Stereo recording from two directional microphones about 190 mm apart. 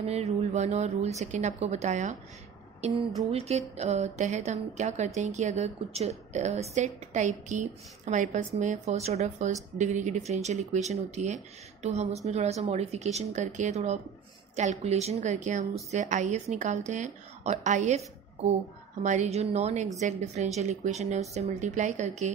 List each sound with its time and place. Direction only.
0.0 s a woman's voice: 35° right (ahead or behind)
3.3 s a woman's voice: 35° right (ahead or behind)